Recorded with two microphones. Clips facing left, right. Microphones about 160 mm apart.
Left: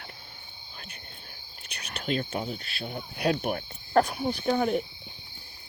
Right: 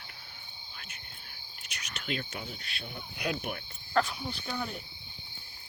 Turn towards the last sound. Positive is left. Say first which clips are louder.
# left 12 dB
turn(degrees=55)  # may be behind; listen again after turning